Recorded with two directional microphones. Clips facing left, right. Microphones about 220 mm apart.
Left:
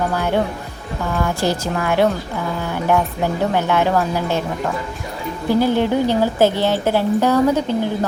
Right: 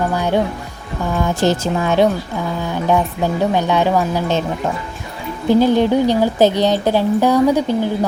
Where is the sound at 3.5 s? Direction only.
15° right (ahead or behind).